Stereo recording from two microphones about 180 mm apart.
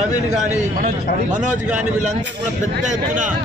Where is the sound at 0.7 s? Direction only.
45° right (ahead or behind).